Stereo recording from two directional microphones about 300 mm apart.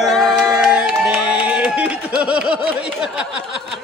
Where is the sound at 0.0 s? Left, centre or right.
Centre.